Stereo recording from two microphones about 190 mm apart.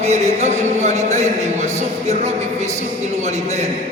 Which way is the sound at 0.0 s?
35° right (ahead or behind).